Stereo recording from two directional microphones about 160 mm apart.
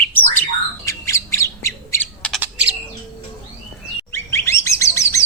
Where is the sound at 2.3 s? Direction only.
10° right (ahead or behind).